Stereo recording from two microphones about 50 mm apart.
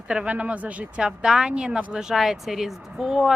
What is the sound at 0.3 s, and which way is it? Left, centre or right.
Speech, right.